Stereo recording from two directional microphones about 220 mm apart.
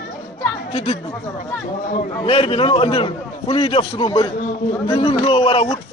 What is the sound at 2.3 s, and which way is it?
Speech, 25° left (ahead or behind).